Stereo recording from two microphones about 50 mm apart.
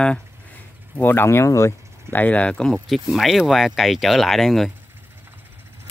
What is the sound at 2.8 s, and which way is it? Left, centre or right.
Speech, centre.